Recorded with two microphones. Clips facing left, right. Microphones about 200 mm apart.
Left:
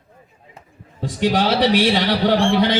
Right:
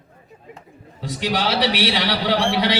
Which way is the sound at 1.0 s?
50° left (ahead or behind).